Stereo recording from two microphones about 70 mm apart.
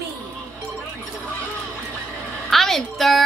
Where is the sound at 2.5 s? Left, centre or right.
Centre.